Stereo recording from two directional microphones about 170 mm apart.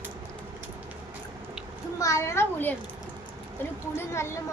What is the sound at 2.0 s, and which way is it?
A woman's voice, 20° left (ahead or behind).